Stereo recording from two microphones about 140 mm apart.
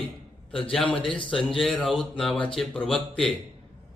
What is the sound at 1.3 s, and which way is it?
A man's voice, 5° left (ahead or behind).